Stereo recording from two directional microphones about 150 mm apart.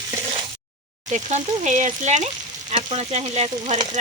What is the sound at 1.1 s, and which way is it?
Stir, 50° right (ahead or behind).